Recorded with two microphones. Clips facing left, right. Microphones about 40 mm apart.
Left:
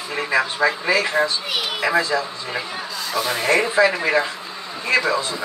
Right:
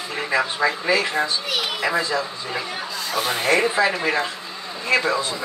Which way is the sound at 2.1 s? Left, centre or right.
Centre.